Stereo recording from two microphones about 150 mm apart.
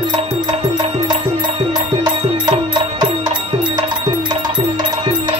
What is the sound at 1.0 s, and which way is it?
Music, 30° right (ahead or behind).